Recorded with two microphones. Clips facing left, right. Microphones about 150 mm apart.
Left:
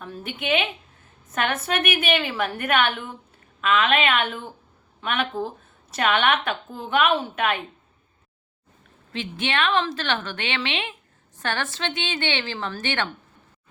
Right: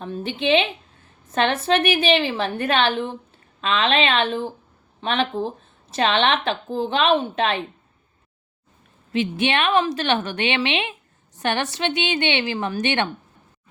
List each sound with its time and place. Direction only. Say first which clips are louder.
0.0 s a woman's voice: right 7 dB; 25° right (ahead or behind)
9.1 s a woman's voice: right 5 dB; 20° right (ahead or behind)